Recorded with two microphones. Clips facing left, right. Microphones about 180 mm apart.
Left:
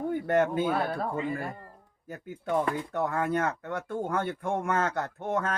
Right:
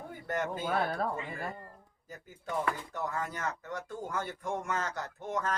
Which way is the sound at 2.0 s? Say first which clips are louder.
Left 9 dB; 60° left (ahead or behind).